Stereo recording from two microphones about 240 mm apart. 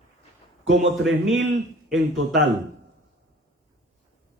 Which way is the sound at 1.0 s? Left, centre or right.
Centre.